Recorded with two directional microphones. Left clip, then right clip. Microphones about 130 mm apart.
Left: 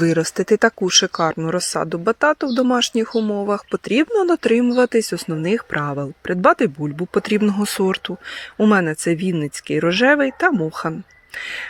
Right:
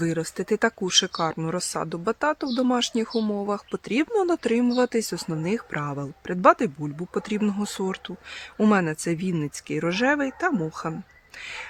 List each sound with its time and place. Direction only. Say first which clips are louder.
0.0 s speech: left 9 dB; 50° left (ahead or behind)
0.5 s speech: left 7 dB; 30° left (ahead or behind)
8.7 s speech: left 7 dB; 25° left (ahead or behind)